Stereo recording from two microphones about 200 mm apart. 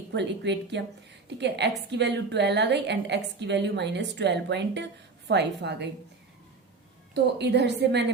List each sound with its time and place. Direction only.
0.1 s a woman's voice: 60° right (ahead or behind)
7.1 s a woman's voice: 60° right (ahead or behind)